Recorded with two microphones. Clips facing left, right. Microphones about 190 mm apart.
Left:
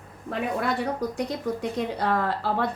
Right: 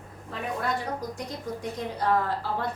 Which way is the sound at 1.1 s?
70° left (ahead or behind).